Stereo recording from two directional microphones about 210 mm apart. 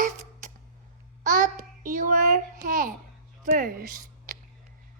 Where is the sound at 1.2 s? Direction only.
40° right (ahead or behind).